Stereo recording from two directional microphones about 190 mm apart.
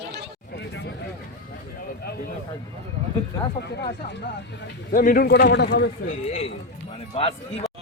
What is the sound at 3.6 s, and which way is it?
Speech, 60° left (ahead or behind).